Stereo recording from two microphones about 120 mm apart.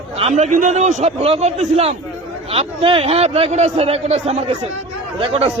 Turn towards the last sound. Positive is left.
turn(degrees=-55)  # may be behind; listen again after turning